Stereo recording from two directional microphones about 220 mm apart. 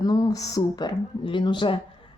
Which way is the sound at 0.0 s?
15° left (ahead or behind).